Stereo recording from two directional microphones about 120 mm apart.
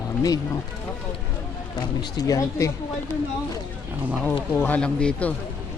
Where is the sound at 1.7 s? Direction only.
30° left (ahead or behind).